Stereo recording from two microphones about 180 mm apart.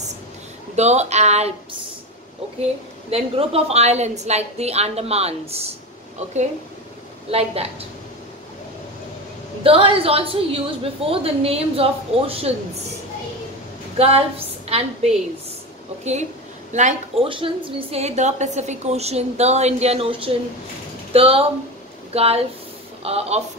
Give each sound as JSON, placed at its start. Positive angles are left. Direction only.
{"t": 0.7, "sound": "a woman's voice", "side_deg": -40}
{"t": 3.1, "sound": "a woman's voice", "side_deg": -30}
{"t": 9.6, "sound": "a woman's voice", "side_deg": -30}
{"t": 13.9, "sound": "a woman's voice", "side_deg": -35}
{"t": 16.0, "sound": "a woman's voice", "side_deg": -40}
{"t": 17.3, "sound": "a woman's voice", "side_deg": -30}